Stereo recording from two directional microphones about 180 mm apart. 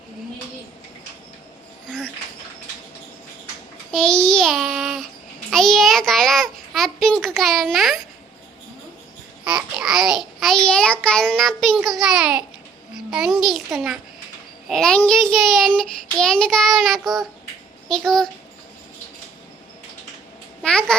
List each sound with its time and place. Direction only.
3.9 s child singing: 5° left (ahead or behind)
5.5 s a sound: centre (ahead or behind)
9.4 s babbling: 5° right (ahead or behind)
11.0 s child singing: 5° left (ahead or behind)
17.8 s a child's voice: centre (ahead or behind)
20.6 s a child's voice: 5° left (ahead or behind)